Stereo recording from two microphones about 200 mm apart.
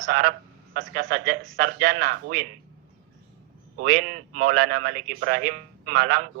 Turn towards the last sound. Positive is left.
turn(degrees=-45)  # may be behind; listen again after turning